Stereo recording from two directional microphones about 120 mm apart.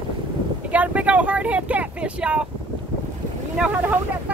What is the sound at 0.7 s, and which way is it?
Speech, 10° right (ahead or behind).